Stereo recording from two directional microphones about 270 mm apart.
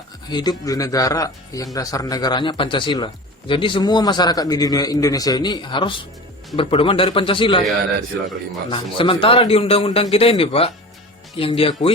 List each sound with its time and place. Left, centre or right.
0.3 s a man's voice: centre
8.7 s a man's voice: centre